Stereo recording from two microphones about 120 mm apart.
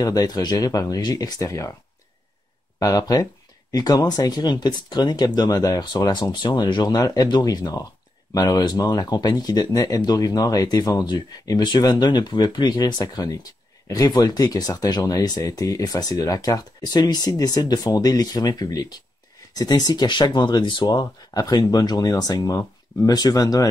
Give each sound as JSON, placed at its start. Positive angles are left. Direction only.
{"t": 0.0, "sound": "speech", "side_deg": 30}
{"t": 2.8, "sound": "speech", "side_deg": 30}